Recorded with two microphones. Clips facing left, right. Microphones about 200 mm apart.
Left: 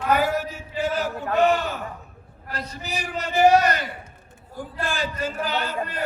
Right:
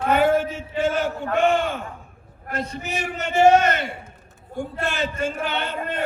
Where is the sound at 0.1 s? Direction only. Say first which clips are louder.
Right 4 dB; 25° right (ahead or behind).